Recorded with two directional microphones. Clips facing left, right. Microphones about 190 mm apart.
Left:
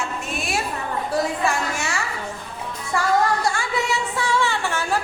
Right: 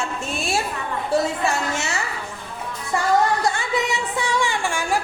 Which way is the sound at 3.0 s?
20° right (ahead or behind).